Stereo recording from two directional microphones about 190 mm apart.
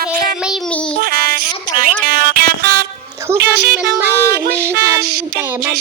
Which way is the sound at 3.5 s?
55° right (ahead or behind).